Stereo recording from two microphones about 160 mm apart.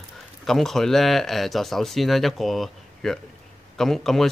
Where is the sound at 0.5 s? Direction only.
Centre (ahead or behind).